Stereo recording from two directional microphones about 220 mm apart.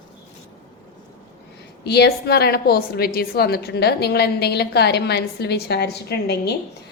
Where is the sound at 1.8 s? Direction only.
50° left (ahead or behind).